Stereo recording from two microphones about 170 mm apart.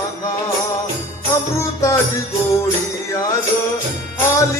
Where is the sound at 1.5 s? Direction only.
15° left (ahead or behind).